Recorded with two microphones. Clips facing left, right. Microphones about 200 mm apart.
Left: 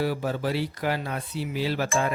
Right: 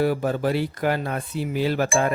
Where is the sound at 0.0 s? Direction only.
50° right (ahead or behind).